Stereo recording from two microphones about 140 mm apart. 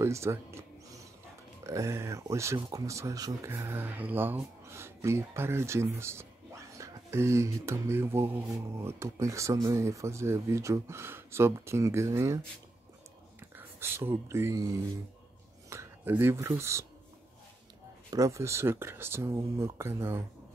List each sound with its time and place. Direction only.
0.0 s music: 20° right (ahead or behind)
1.6 s speech: 20° right (ahead or behind)
13.6 s speech: 15° right (ahead or behind)
18.1 s speech: 20° right (ahead or behind)